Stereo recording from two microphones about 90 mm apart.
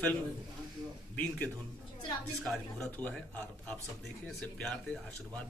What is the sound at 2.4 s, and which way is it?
Speech, 5° left (ahead or behind).